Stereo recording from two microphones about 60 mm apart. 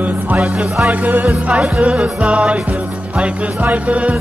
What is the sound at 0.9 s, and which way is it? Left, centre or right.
Music, right.